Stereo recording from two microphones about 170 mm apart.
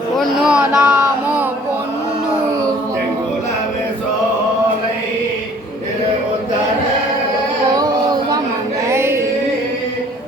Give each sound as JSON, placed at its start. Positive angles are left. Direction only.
{"t": 0.2, "sound": "speech", "side_deg": -5}
{"t": 8.9, "sound": "music", "side_deg": -15}